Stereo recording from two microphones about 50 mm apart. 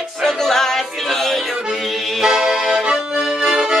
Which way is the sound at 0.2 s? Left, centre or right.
Centre.